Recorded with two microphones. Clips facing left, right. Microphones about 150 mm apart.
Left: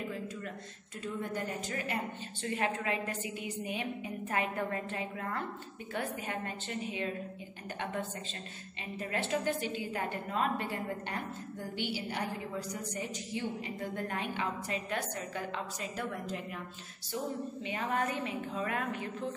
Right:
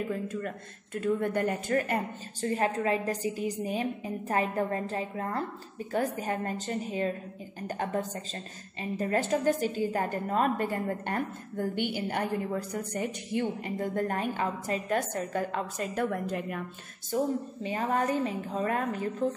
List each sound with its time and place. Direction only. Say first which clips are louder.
0.1 s a sound: right 7 dB; 50° right (ahead or behind)
1.0 s a woman's voice: right 9 dB; 60° right (ahead or behind)
2.4 s a woman's voice: right 6 dB; 40° right (ahead or behind); by 16.6 s 55° right (ahead or behind)
17.6 s a woman's voice: right 6 dB; 35° right (ahead or behind)